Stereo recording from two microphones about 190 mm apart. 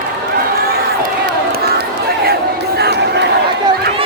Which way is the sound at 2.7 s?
60° right (ahead or behind).